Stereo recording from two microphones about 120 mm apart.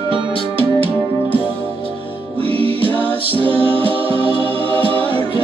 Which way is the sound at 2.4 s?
50° right (ahead or behind).